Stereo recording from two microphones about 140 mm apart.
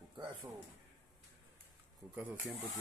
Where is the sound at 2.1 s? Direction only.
10° right (ahead or behind).